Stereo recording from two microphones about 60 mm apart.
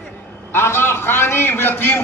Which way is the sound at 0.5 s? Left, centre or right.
Left.